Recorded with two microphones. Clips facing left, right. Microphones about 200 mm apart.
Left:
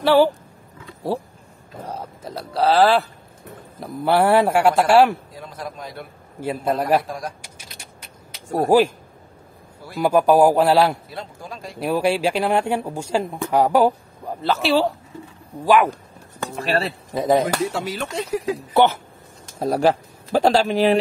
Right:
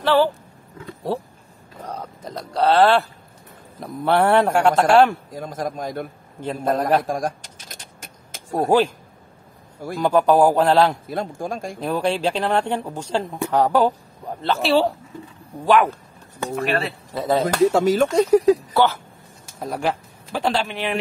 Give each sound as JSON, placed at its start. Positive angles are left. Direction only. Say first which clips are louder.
{"t": 0.0, "sound": "speech", "louder": "left 2 dB", "side_deg": 10}
{"t": 2.0, "sound": "speech", "louder": "even", "side_deg": 5}
{"t": 5.3, "sound": "speech", "louder": "right 6 dB", "side_deg": -45}
{"t": 6.4, "sound": "speech", "louder": "even", "side_deg": 10}
{"t": 7.0, "sound": "speech", "louder": "right 5 dB", "side_deg": -50}
{"t": 8.5, "sound": "speech", "louder": "left 2 dB", "side_deg": 10}
{"t": 9.9, "sound": "speech", "louder": "left 1 dB", "side_deg": 10}
{"t": 11.1, "sound": "speech", "louder": "right 8 dB", "side_deg": -50}
{"t": 11.8, "sound": "speech", "louder": "left 2 dB", "side_deg": 10}
{"t": 16.5, "sound": "speech", "louder": "even", "side_deg": 35}
{"t": 17.1, "sound": "speech", "louder": "left 3 dB", "side_deg": 15}
{"t": 17.6, "sound": "speech", "louder": "right 10 dB", "side_deg": -45}
{"t": 18.7, "sound": "speech", "louder": "left 2 dB", "side_deg": 20}
{"t": 19.6, "sound": "speech", "louder": "left 6 dB", "side_deg": 35}